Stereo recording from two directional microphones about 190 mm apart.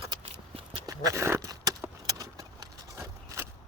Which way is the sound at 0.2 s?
30° right (ahead or behind).